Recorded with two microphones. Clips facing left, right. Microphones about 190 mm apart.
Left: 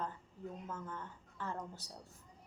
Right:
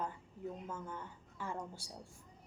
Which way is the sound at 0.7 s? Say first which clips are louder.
Even; 10° right (ahead or behind).